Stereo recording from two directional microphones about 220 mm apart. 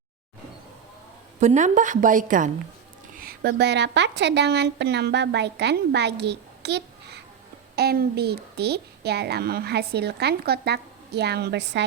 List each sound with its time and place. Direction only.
1.4 s a woman's voice: 35° right (ahead or behind); by 11.9 s 50° right (ahead or behind)